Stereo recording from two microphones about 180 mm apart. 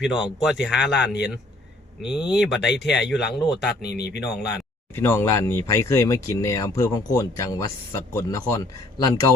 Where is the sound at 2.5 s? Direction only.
75° left (ahead or behind).